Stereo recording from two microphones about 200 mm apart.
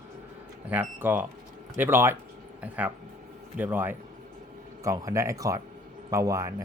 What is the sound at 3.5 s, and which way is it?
Speech, 10° right (ahead or behind).